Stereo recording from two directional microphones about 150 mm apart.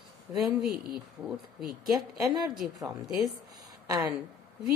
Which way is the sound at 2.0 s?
25° right (ahead or behind).